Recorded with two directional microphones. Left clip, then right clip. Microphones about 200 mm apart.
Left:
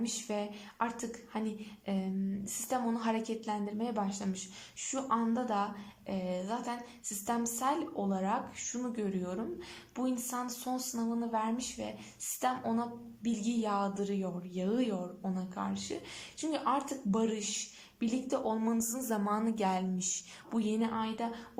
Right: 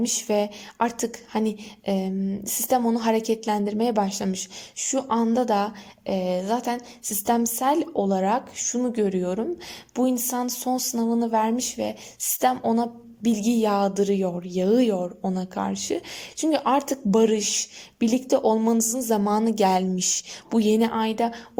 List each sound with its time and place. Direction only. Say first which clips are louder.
0.0 s speech: right 13 dB; 40° right (ahead or behind)